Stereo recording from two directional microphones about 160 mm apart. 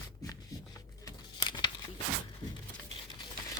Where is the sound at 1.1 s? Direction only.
30° left (ahead or behind).